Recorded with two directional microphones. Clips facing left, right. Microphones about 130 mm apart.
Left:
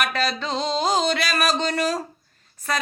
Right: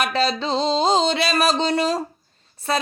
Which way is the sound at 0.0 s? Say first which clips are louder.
Right 3 dB; 30° right (ahead or behind).